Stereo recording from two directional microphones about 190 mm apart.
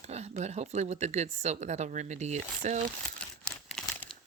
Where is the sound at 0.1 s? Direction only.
35° right (ahead or behind).